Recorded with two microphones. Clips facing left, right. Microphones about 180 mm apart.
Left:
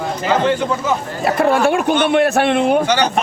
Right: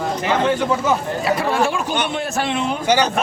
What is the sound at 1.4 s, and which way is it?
A man's voice, 60° left (ahead or behind).